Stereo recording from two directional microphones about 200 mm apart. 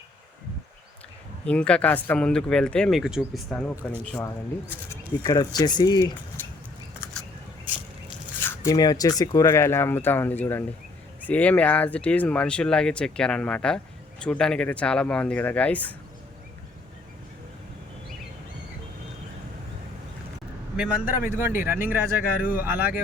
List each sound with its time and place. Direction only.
1.5 s speech: 5° left (ahead or behind)
5.2 s speech: 20° left (ahead or behind)
8.4 s speech: 15° left (ahead or behind)
20.7 s a man's voice: 5° right (ahead or behind)